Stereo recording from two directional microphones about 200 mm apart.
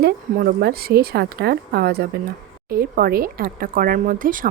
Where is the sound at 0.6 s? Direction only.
50° right (ahead or behind).